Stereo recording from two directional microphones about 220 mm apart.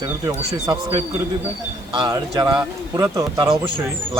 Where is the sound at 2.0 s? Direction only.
20° right (ahead or behind).